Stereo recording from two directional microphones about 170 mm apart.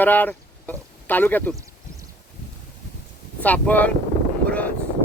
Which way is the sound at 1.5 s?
20° right (ahead or behind).